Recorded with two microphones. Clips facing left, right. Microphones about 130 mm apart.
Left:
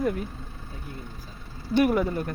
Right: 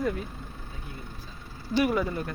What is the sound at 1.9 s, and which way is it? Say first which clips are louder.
Speech: left 3 dB; 10° left (ahead or behind).